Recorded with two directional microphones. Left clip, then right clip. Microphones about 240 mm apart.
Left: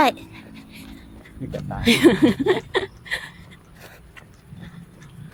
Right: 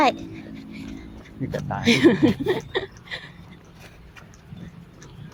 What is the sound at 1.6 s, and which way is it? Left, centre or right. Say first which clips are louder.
Speech: right 4 dB; right.